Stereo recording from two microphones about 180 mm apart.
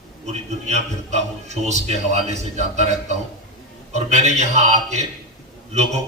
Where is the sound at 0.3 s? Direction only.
40° right (ahead or behind).